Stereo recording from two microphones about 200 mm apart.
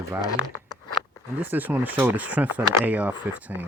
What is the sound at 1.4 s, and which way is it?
Speech, 10° right (ahead or behind).